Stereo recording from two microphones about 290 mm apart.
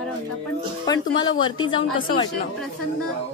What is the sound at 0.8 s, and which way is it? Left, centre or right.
A woman's voice, centre.